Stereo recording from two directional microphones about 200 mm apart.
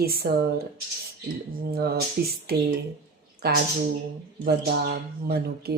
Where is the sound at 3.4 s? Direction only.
50° right (ahead or behind).